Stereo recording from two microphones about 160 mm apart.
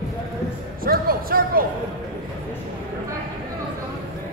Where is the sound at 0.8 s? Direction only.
65° right (ahead or behind).